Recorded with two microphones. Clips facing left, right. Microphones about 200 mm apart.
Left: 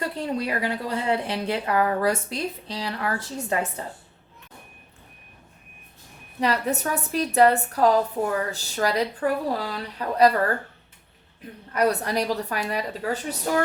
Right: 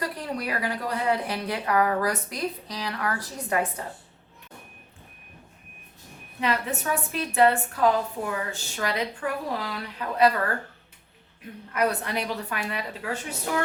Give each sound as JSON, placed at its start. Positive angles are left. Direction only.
{"t": 0.2, "sound": "speech", "side_deg": 25}
{"t": 6.4, "sound": "a woman's voice", "side_deg": 40}
{"t": 11.7, "sound": "a woman's voice", "side_deg": 35}